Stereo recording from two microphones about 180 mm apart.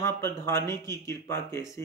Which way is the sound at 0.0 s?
15° left (ahead or behind).